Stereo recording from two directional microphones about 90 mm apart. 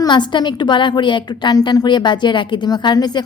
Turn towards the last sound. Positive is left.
turn(degrees=50)  # may be behind; listen again after turning